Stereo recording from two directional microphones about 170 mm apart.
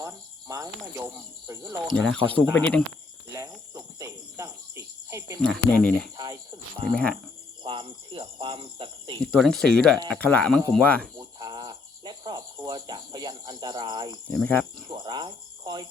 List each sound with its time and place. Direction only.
0.0 s cricket: 20° right (ahead or behind)
1.9 s speech: 5° left (ahead or behind)
2.5 s cricket: 10° left (ahead or behind)
3.3 s cricket: 20° right (ahead or behind)
5.4 s speech: 5° left (ahead or behind)
6.1 s cricket: 20° right (ahead or behind)
6.9 s speech: 5° left (ahead or behind)
7.6 s speech: 30° right (ahead or behind)
9.2 s speech: centre (ahead or behind)
10.1 s cricket: 10° left (ahead or behind)
11.2 s cricket: 25° right (ahead or behind)
14.3 s cricket: 10° left (ahead or behind)
14.9 s cricket: 25° right (ahead or behind)